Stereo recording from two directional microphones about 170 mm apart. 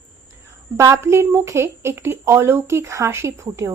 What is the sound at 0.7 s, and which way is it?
Speech, 15° right (ahead or behind).